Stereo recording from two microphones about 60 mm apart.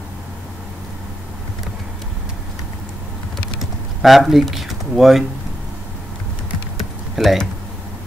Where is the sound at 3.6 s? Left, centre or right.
Centre.